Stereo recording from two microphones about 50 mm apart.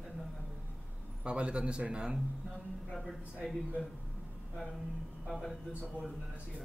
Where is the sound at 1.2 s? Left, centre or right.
Right.